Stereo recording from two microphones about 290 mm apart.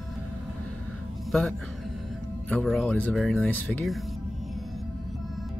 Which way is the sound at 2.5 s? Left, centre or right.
Centre.